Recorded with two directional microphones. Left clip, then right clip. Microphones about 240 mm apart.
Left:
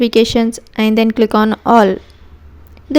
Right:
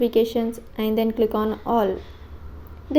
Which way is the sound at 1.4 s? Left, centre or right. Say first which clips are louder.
Left 12 dB; left.